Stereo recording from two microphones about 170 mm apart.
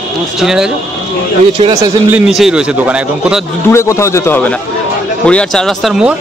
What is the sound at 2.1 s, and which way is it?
Speech, 5° right (ahead or behind).